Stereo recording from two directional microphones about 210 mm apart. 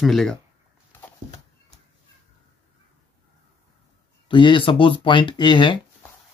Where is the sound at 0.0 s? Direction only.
Centre (ahead or behind).